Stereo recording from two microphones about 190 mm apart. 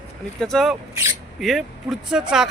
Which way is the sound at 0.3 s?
Centre (ahead or behind).